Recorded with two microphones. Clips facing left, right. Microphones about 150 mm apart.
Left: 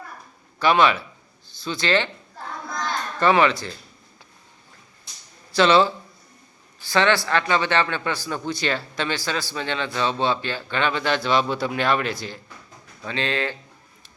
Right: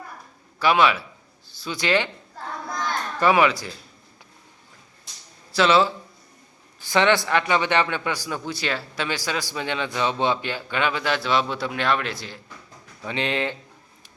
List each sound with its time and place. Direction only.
0.6 s a man's voice: 5° right (ahead or behind)
3.2 s speech: 10° right (ahead or behind)
5.5 s a man's voice: 5° right (ahead or behind)
6.8 s speech: 20° right (ahead or behind); by 12.4 s centre (ahead or behind)
13.1 s speech: 20° right (ahead or behind)